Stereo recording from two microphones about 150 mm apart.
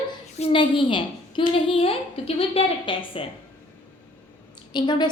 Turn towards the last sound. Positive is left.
turn(degrees=30)  # may be behind; listen again after turning